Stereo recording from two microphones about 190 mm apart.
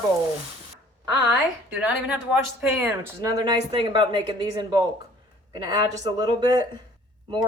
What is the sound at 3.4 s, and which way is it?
Speech, 25° right (ahead or behind).